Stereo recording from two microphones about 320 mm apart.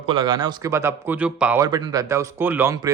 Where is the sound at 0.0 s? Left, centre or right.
Centre.